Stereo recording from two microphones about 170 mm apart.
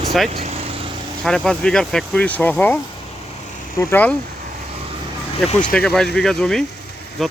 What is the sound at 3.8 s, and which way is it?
Speech, 10° left (ahead or behind).